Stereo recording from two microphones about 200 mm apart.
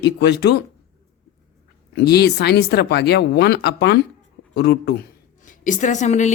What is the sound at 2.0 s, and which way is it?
A woman's voice, 55° left (ahead or behind).